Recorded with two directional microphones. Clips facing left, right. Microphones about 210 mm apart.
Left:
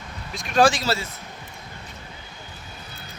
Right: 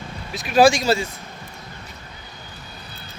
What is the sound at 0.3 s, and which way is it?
Speech, 5° right (ahead or behind).